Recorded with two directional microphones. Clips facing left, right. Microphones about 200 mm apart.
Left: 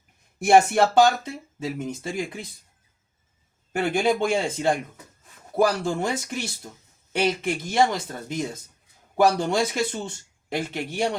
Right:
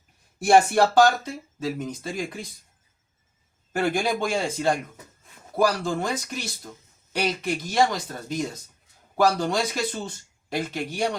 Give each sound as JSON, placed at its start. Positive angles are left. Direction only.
{"t": 0.4, "sound": "speech", "side_deg": 20}
{"t": 3.7, "sound": "speech", "side_deg": 25}